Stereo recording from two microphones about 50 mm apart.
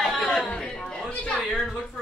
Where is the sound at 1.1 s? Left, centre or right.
Left.